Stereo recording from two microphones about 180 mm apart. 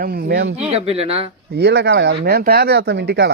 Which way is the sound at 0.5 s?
35° right (ahead or behind).